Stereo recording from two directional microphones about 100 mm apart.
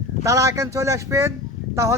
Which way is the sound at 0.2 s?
30° right (ahead or behind).